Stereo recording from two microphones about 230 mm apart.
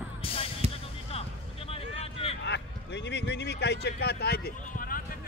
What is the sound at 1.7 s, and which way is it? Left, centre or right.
Vehicle, left.